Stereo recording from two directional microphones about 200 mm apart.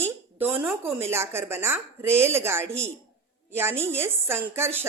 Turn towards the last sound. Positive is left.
turn(degrees=-10)  # may be behind; listen again after turning